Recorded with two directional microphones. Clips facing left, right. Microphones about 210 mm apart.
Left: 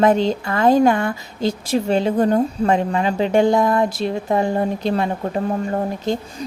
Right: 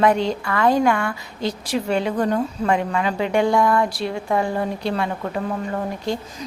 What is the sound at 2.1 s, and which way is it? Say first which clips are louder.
A woman's voice: left 4 dB; 25° left (ahead or behind).